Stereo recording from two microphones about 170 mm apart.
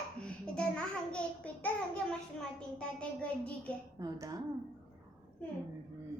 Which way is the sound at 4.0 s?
20° right (ahead or behind).